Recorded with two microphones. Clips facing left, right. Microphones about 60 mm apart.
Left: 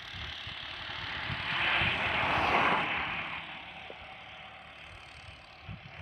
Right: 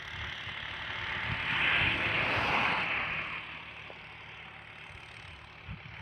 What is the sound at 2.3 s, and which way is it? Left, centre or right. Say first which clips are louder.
Vehicle: left 5 dB; left.